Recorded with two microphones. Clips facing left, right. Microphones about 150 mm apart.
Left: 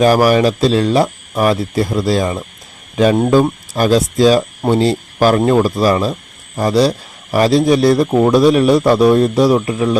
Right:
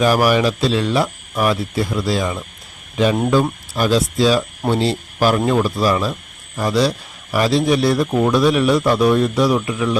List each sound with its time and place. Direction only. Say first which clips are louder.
0.0 s a man's voice: left 4 dB; 40° left (ahead or behind)
3.8 s a man's voice: left 4 dB; 45° left (ahead or behind)